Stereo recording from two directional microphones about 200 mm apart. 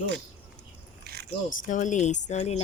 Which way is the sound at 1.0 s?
55° right (ahead or behind).